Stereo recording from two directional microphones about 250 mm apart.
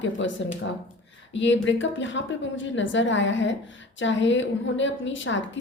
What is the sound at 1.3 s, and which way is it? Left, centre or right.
A woman's voice, left.